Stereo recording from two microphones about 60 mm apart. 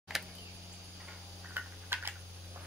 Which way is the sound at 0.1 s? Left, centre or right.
Centre.